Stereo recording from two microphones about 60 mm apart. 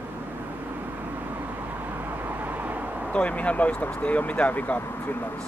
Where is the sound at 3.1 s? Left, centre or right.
Left.